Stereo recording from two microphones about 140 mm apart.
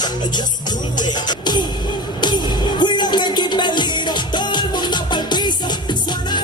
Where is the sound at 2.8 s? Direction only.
35° left (ahead or behind).